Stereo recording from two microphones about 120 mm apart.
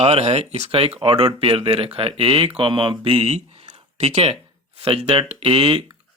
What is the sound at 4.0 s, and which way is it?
Speech, 65° right (ahead or behind).